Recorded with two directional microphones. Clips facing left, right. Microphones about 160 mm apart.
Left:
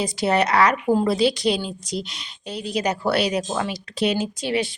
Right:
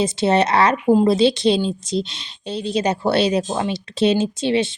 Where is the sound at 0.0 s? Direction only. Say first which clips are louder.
Right 4 dB; 25° right (ahead or behind).